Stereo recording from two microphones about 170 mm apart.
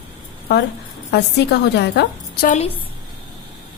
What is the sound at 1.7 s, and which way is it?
Speech, 85° left.